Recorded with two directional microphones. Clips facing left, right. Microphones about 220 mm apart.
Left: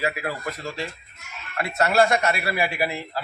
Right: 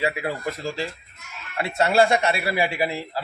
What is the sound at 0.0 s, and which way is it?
A man's voice, 25° right (ahead or behind).